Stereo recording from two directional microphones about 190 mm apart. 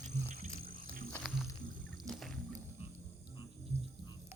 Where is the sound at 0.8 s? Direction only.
50° right (ahead or behind).